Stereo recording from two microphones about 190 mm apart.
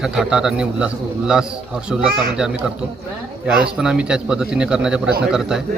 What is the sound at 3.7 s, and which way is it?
A man's voice, 5° right (ahead or behind).